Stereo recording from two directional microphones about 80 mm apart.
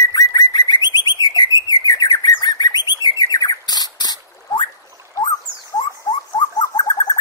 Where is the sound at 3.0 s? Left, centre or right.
Left.